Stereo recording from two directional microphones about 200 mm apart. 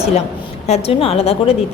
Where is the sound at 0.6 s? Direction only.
30° left (ahead or behind).